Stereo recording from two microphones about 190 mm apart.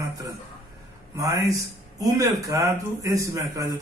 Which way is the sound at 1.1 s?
15° right (ahead or behind).